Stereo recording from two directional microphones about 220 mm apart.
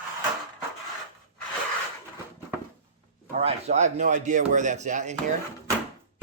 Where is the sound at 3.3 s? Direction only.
30° right (ahead or behind).